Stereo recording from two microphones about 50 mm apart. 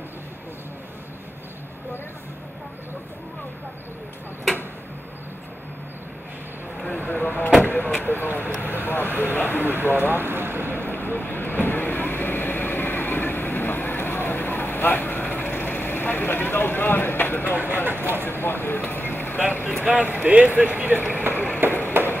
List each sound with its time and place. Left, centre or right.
6.9 s a sound: left
8.0 s speech: left
8.8 s vehicle: left
9.6 s vehicle: right
10.7 s vehicle: left
17.5 s bird: right
17.8 s vehicle: right
18.2 s vehicle: left
19.8 s speech: right
21.3 s a sound: left